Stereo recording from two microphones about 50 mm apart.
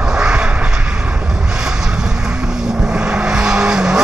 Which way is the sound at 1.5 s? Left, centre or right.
Centre.